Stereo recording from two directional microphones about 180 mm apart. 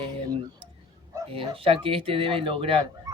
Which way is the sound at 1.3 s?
30° right (ahead or behind).